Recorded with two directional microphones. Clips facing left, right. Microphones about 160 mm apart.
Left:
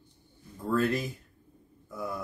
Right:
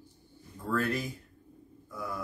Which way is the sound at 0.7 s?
25° left (ahead or behind).